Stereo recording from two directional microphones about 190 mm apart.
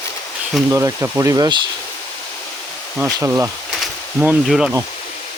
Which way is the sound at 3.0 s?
10° right (ahead or behind).